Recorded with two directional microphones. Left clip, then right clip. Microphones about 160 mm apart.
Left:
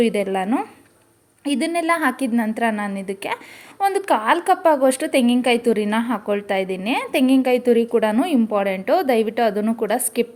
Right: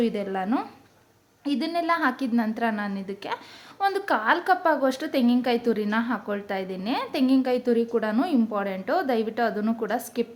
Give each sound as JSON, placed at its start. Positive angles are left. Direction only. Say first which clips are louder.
{"t": 0.0, "sound": "a woman's voice", "louder": "left 7 dB", "side_deg": 20}